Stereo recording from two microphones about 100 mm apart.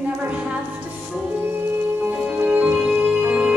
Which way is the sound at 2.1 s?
15° right (ahead or behind).